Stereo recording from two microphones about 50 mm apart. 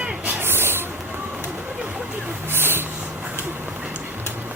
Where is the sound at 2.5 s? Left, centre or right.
Right.